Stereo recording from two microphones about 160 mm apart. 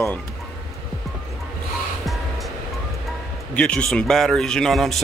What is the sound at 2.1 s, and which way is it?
Vehicle, centre (ahead or behind).